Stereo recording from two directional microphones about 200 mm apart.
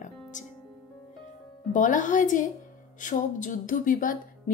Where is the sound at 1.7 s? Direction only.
40° left (ahead or behind).